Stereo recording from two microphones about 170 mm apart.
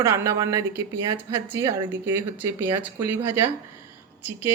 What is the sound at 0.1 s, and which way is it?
Speech, 20° right (ahead or behind).